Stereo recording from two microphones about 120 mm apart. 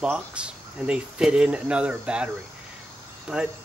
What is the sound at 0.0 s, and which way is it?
Speech, 10° right (ahead or behind).